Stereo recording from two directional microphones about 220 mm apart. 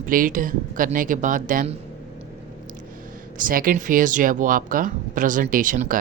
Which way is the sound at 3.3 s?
40° right (ahead or behind).